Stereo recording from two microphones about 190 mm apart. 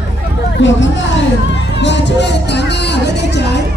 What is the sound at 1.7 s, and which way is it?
Music, 70° left (ahead or behind).